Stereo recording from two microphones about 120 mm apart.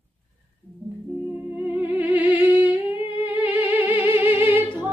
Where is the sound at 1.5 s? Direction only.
15° right (ahead or behind).